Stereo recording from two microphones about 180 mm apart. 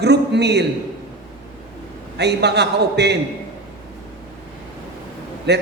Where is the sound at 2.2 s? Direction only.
70° right (ahead or behind).